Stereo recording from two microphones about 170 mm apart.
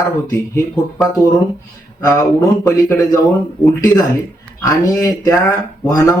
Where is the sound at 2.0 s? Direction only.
15° left (ahead or behind).